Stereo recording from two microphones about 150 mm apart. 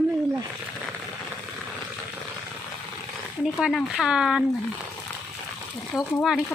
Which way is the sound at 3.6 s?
5° right (ahead or behind).